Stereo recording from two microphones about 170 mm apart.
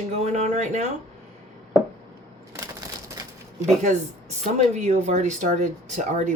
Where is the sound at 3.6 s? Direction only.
45° right (ahead or behind).